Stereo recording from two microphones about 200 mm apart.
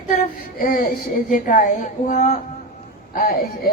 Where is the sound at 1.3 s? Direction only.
40° left (ahead or behind).